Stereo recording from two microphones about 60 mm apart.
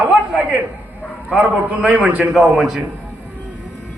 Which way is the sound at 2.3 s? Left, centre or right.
Centre.